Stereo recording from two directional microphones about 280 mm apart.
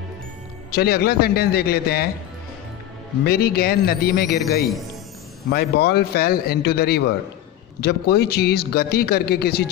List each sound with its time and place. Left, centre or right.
0.7 s a man's voice: left
3.3 s a man's voice: left
5.5 s a man's voice: left